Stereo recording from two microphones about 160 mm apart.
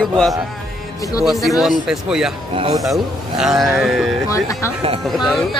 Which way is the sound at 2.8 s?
Centre (ahead or behind).